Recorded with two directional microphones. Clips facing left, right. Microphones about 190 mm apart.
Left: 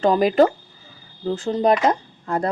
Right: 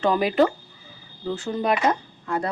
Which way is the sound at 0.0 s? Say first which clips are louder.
Left 4 dB; 40° left (ahead or behind).